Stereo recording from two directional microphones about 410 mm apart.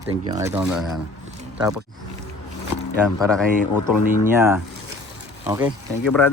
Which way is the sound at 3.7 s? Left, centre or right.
Left.